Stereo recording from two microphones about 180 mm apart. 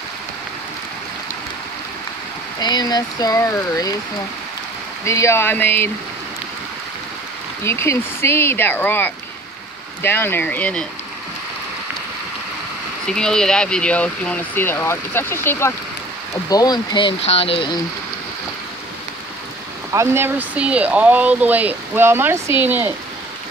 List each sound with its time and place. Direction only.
2.6 s speech: 20° left (ahead or behind)
5.0 s speech: 15° left (ahead or behind)
7.6 s speech: 15° left (ahead or behind)
13.0 s speech: 5° left (ahead or behind); by 17.7 s 30° left (ahead or behind)
19.9 s speech: 15° right (ahead or behind)